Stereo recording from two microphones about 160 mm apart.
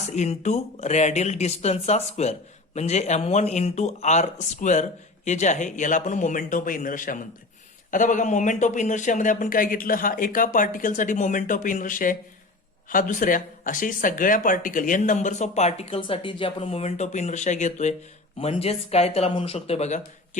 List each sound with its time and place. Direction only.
0.0 s a man's voice: 45° left (ahead or behind)